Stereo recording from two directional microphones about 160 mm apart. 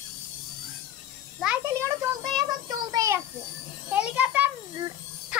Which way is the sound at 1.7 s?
15° right (ahead or behind).